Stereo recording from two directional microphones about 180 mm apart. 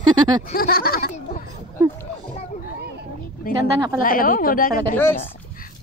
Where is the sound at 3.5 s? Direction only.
55° left (ahead or behind).